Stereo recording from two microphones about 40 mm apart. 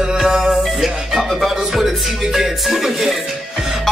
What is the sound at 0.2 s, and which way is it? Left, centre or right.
Music, centre.